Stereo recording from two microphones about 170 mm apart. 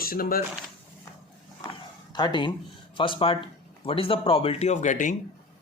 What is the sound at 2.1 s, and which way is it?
Speech, 25° left (ahead or behind).